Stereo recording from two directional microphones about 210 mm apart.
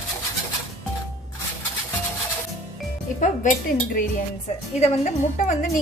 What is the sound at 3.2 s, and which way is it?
A woman's voice, 40° left (ahead or behind).